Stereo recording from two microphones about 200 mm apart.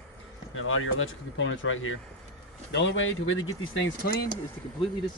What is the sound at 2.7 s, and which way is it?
Speech, 65° left (ahead or behind).